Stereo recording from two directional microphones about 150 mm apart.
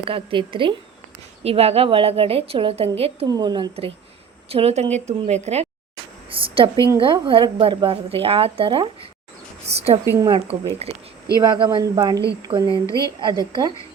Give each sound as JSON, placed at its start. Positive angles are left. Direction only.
{"t": 0.0, "sound": "speech", "side_deg": -35}
{"t": 3.2, "sound": "a woman's voice", "side_deg": -30}
{"t": 6.3, "sound": "a sound", "side_deg": -35}
{"t": 6.7, "sound": "a woman's voice", "side_deg": 20}
{"t": 7.0, "sound": "a woman's voice", "side_deg": -35}
{"t": 10.1, "sound": "speech", "side_deg": -25}
{"t": 10.8, "sound": "a woman's voice", "side_deg": -45}
{"t": 11.3, "sound": "speech", "side_deg": -30}
{"t": 12.6, "sound": "a woman's voice", "side_deg": 20}
{"t": 13.1, "sound": "speech", "side_deg": -30}